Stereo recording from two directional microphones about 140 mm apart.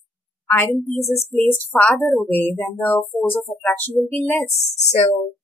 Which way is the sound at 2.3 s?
15° left (ahead or behind).